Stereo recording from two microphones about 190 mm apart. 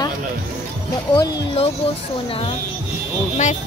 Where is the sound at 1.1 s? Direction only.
20° left (ahead or behind).